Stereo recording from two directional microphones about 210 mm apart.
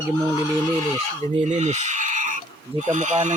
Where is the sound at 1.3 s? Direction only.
35° right (ahead or behind).